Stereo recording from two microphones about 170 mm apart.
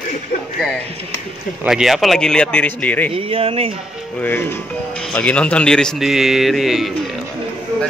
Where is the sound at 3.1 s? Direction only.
35° right (ahead or behind).